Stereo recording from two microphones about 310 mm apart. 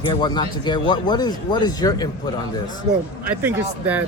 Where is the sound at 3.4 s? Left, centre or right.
Centre.